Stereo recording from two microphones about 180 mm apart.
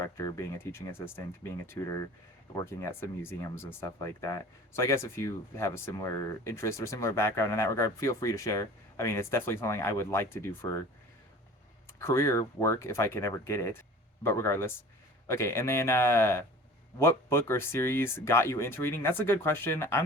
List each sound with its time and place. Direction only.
0.0 s speech: 15° left (ahead or behind)
11.9 s speech: 15° left (ahead or behind)